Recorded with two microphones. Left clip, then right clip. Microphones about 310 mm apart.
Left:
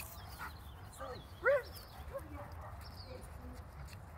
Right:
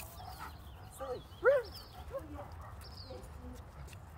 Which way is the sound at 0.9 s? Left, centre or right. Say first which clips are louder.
Right 5 dB; centre.